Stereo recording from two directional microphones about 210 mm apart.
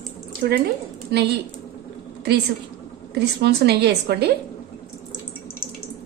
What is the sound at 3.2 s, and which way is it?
A woman's voice, 50° right (ahead or behind).